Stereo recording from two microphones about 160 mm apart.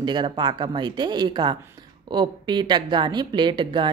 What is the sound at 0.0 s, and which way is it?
A woman's voice, 30° right (ahead or behind).